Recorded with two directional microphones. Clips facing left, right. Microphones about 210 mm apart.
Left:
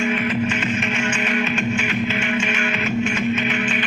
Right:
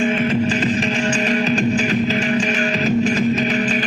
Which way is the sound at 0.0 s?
30° right (ahead or behind).